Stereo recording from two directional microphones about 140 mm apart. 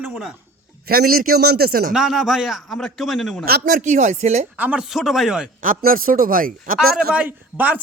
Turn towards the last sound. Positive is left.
turn(degrees=-10)  # may be behind; listen again after turning